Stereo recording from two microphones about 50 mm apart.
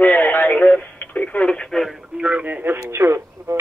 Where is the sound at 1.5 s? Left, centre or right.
Centre.